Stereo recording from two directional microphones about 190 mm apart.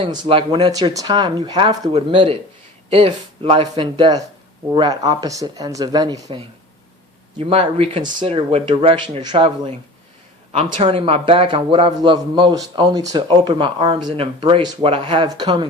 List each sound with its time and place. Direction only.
0.0 s speech: 25° right (ahead or behind)